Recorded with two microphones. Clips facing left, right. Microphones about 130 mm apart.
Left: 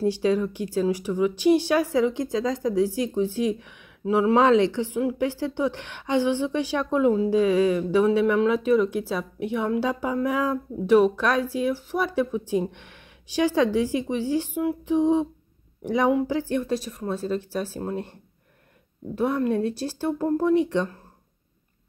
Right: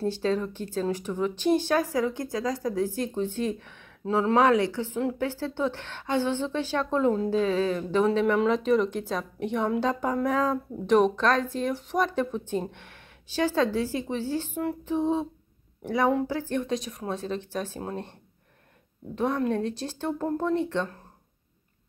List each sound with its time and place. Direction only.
0.0 s a woman's voice: 10° left (ahead or behind)
3.0 s speech: 10° left (ahead or behind)
19.1 s speech: 5° left (ahead or behind)